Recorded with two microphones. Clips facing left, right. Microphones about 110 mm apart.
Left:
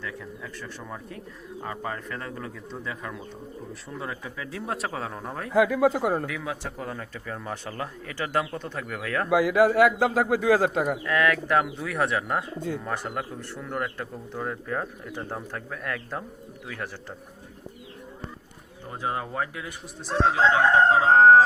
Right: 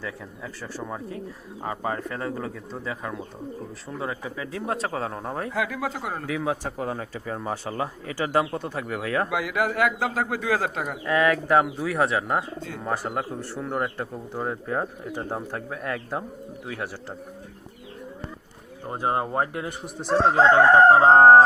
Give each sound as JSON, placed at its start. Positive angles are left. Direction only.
{"t": 0.0, "sound": "speech", "side_deg": -25}
{"t": 5.5, "sound": "speech", "side_deg": 20}
{"t": 6.5, "sound": "speech", "side_deg": -45}
{"t": 6.7, "sound": "speech", "side_deg": -15}
{"t": 9.6, "sound": "speech", "side_deg": 20}
{"t": 11.0, "sound": "speech", "side_deg": -25}
{"t": 12.9, "sound": "speech", "side_deg": -5}
{"t": 13.1, "sound": "speech", "side_deg": -20}
{"t": 18.9, "sound": "speech", "side_deg": -40}
{"t": 19.6, "sound": "speech", "side_deg": -55}
{"t": 21.2, "sound": "speech", "side_deg": -35}